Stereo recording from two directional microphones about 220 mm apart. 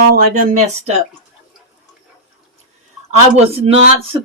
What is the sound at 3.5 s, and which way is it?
Speech, 25° right (ahead or behind).